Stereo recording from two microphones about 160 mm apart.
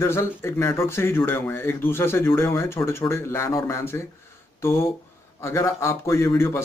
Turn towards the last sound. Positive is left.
turn(degrees=15)  # may be behind; listen again after turning